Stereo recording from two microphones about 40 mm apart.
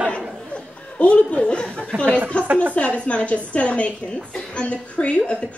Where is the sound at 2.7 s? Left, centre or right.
Left.